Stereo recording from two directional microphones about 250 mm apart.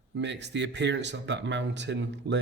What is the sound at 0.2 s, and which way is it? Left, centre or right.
Speech, right.